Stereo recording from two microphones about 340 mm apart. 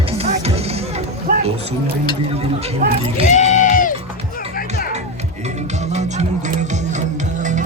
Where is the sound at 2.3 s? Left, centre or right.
Centre.